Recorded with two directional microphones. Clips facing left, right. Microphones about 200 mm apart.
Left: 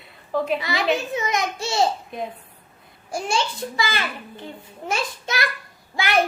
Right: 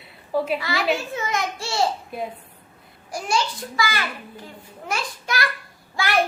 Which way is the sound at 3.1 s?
25° left (ahead or behind).